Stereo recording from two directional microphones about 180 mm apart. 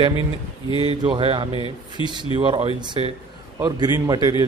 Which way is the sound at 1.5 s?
25° left (ahead or behind).